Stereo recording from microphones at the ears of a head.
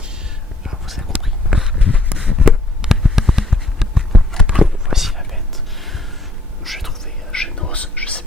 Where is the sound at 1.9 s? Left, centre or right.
Centre.